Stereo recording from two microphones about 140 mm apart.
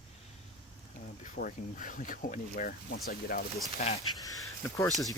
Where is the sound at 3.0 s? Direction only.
90° left.